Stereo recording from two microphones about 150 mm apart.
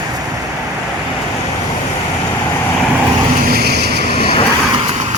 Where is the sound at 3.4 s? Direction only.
90° right.